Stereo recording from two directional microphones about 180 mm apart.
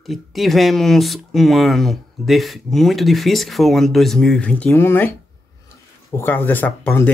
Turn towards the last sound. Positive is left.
turn(degrees=10)  # may be behind; listen again after turning